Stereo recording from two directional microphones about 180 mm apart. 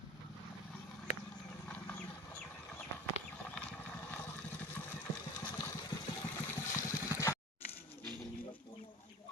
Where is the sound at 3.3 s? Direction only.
5° left (ahead or behind).